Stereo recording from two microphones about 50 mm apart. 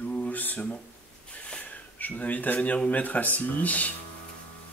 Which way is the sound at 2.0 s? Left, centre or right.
Left.